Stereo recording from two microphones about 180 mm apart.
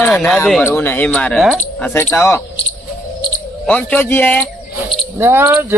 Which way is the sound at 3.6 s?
5° left (ahead or behind).